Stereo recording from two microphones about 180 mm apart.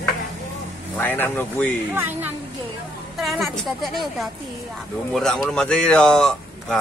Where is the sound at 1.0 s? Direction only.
10° left (ahead or behind).